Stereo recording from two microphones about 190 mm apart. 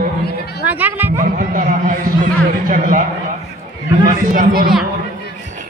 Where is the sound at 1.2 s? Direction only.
45° right (ahead or behind).